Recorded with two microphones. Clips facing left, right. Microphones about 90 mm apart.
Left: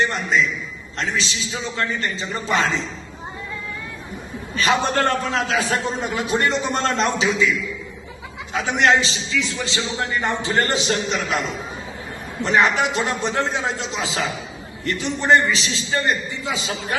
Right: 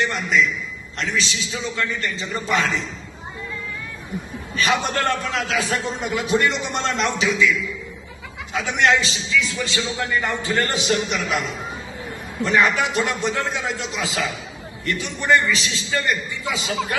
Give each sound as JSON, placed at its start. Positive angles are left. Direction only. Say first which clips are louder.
{"t": 0.0, "sound": "a man's voice", "louder": "even", "side_deg": 35}
{"t": 4.5, "sound": "a man's voice", "louder": "left 2 dB", "side_deg": 35}